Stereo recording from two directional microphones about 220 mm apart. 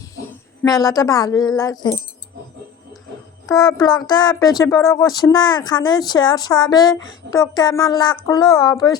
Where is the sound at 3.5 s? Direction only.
15° left (ahead or behind).